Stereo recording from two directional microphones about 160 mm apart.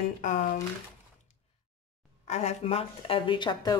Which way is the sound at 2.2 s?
45° left (ahead or behind).